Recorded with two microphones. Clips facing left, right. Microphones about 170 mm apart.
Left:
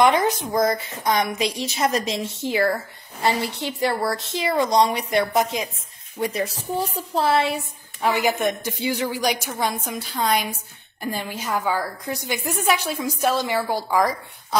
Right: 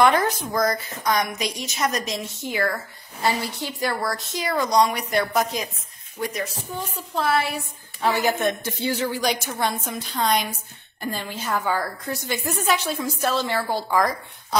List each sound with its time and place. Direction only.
0.0 s a woman's voice: 20° left (ahead or behind)